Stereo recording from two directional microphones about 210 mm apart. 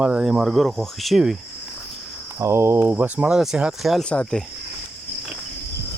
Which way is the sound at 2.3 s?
10° right (ahead or behind).